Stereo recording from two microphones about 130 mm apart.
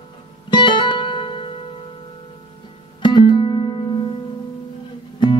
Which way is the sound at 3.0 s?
40° left (ahead or behind).